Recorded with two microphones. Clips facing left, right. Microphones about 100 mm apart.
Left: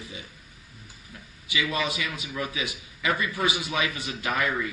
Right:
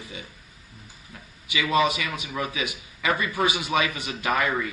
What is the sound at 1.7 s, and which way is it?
Speech, 20° right (ahead or behind).